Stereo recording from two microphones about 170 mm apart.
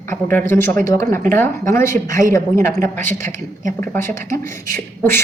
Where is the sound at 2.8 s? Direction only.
50° right (ahead or behind).